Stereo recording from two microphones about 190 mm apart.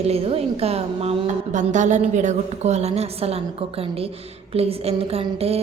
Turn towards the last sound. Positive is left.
turn(degrees=-30)  # may be behind; listen again after turning